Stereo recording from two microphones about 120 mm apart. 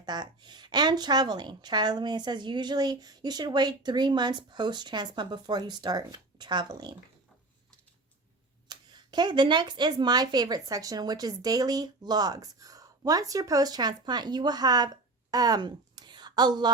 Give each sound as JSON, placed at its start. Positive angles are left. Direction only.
{"t": 0.0, "sound": "a woman's voice", "side_deg": -35}
{"t": 8.6, "sound": "a woman's voice", "side_deg": -40}
{"t": 15.3, "sound": "a sound", "side_deg": -30}